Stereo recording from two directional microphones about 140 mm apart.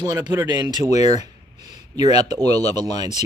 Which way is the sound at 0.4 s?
25° right (ahead or behind).